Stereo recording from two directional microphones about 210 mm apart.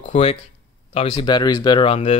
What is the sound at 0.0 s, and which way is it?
A man's voice, 30° left (ahead or behind).